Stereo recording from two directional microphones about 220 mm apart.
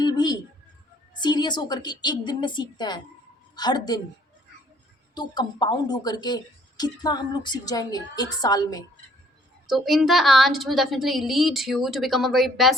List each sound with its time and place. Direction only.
0.0 s a sound: 20° left (ahead or behind)
1.1 s a woman's voice: 20° left (ahead or behind)
5.1 s speech: 20° left (ahead or behind)
9.6 s a woman's voice: centre (ahead or behind)